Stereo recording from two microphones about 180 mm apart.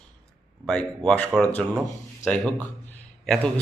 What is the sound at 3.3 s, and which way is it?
Speech, 5° left (ahead or behind).